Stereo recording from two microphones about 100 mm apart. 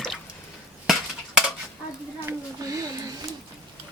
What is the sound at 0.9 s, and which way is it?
Cutlery, 5° right (ahead or behind).